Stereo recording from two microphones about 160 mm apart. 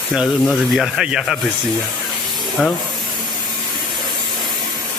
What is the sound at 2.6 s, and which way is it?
Speech, centre (ahead or behind).